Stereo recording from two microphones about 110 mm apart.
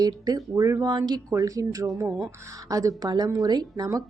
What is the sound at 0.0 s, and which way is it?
Speech, 35° right (ahead or behind).